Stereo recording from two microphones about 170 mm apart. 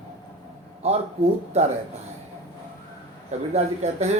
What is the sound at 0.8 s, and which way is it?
Speech, 40° right (ahead or behind).